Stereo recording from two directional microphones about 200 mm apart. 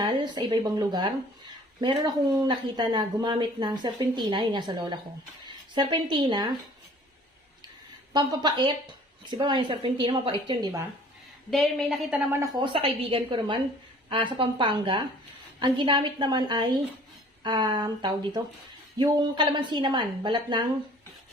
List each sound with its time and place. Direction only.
0.0 s a woman's voice: 20° right (ahead or behind)
8.1 s speech: 20° right (ahead or behind)
11.5 s a woman's voice: centre (ahead or behind); by 20.7 s 20° right (ahead or behind)